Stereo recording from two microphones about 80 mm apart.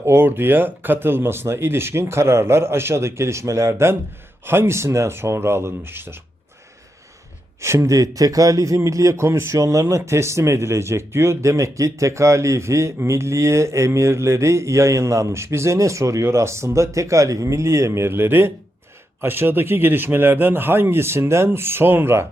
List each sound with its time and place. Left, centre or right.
0.0 s speech: right
7.6 s speech: right